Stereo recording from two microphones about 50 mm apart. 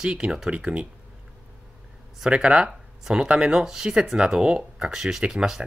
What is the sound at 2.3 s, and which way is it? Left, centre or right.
Speech, centre.